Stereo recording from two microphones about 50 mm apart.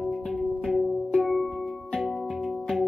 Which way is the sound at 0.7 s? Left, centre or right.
Centre.